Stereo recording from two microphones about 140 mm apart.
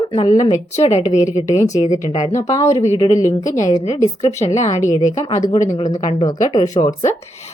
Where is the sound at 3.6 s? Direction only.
25° left (ahead or behind).